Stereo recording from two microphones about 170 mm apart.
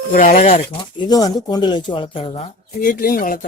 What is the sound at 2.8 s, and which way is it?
Speech, 55° left (ahead or behind).